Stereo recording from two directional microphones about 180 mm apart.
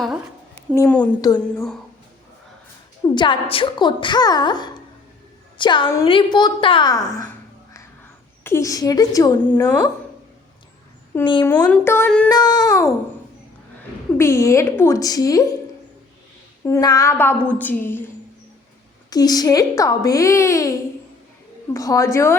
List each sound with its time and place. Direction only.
0.8 s a woman's voice: 5° left (ahead or behind)
1.2 s a woman's voice: 20° left (ahead or behind)
3.0 s a woman's voice: 15° left (ahead or behind)
8.4 s a woman's voice: 15° left (ahead or behind)
11.4 s a woman's voice: 10° left (ahead or behind)
12.3 s a woman's voice: 20° left (ahead or behind)
14.2 s a woman's voice: 15° left (ahead or behind)
16.6 s a woman's voice: 20° left (ahead or behind)
19.1 s a woman's voice: 20° left (ahead or behind)